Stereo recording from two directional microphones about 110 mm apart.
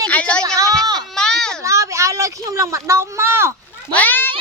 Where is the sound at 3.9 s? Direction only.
15° left (ahead or behind).